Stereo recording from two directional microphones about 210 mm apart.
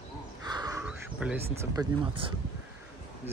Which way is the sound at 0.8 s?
5° right (ahead or behind).